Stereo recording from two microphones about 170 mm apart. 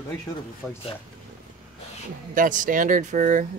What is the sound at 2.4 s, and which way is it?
Speech, 50° right (ahead or behind).